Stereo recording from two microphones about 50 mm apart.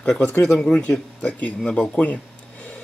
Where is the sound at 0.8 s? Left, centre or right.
Left.